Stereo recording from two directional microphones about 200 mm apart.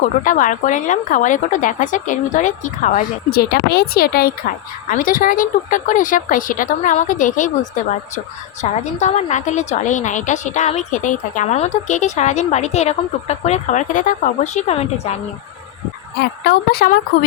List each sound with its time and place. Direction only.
0.0 s a woman's voice: 40° left (ahead or behind)
9.0 s a woman's voice: 35° left (ahead or behind)
16.2 s speech: 55° left (ahead or behind)